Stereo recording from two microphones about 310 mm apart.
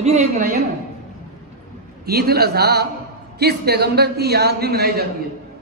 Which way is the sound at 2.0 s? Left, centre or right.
Right.